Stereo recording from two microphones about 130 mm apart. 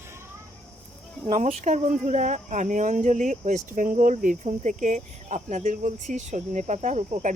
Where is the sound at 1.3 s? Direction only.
80° right.